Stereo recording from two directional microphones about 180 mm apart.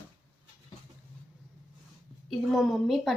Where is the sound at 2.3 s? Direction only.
Centre (ahead or behind).